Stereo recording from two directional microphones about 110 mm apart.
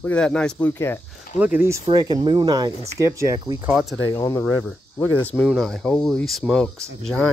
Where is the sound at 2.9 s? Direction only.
30° right (ahead or behind).